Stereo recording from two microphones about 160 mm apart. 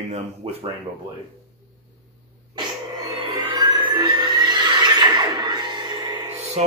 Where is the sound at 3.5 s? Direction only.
25° right (ahead or behind).